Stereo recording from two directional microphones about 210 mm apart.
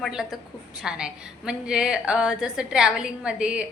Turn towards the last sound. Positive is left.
turn(degrees=-5)  # may be behind; listen again after turning